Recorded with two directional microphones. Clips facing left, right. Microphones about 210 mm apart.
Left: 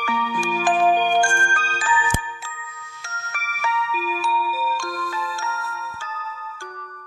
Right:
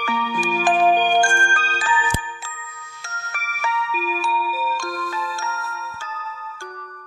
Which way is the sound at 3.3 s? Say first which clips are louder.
Even; 30° right (ahead or behind).